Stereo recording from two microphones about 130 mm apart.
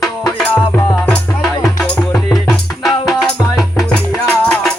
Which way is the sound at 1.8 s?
Centre (ahead or behind).